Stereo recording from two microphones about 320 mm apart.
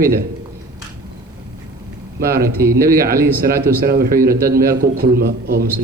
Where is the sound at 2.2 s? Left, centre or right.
Right.